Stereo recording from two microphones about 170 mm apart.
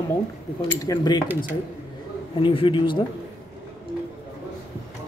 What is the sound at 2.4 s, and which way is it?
Speech, 30° left (ahead or behind).